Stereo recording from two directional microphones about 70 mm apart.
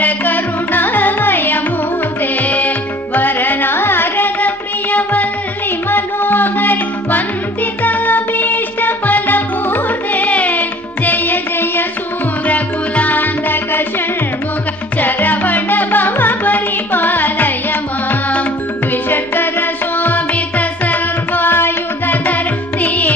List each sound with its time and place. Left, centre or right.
0.0 s music: left
18.9 s music: left